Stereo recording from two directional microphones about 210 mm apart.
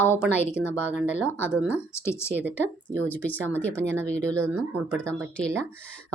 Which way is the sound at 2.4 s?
10° right (ahead or behind).